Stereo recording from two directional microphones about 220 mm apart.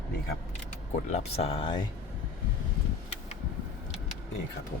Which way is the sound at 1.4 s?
25° left (ahead or behind).